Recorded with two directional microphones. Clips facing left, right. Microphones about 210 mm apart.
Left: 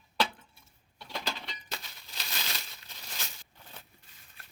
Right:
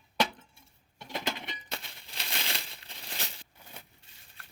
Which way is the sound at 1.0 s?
20° right (ahead or behind).